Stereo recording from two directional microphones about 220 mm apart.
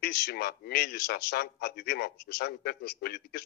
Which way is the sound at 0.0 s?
45° left (ahead or behind).